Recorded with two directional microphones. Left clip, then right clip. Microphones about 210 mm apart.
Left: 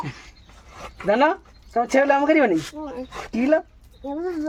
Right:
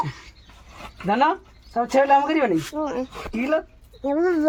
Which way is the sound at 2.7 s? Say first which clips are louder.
Right 7 dB; 25° right (ahead or behind).